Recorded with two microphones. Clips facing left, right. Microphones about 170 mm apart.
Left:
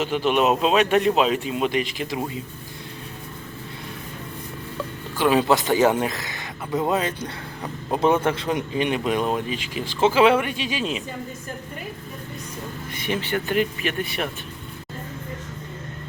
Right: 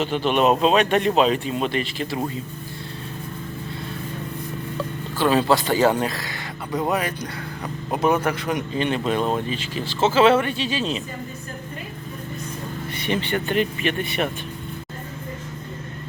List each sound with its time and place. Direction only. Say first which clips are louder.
0.0 s speech: right 1 dB; 10° left (ahead or behind)
5.1 s speech: even; 15° left (ahead or behind)
8.7 s speech: right 1 dB; 15° left (ahead or behind)
13.0 s speech: right 1 dB; 10° left (ahead or behind)